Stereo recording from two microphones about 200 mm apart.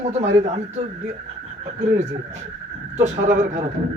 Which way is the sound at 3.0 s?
35° right (ahead or behind).